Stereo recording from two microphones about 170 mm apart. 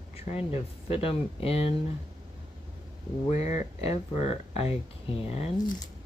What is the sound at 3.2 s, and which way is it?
Speech, 45° left (ahead or behind).